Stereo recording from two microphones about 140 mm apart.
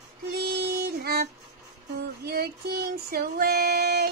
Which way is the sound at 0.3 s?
90° right.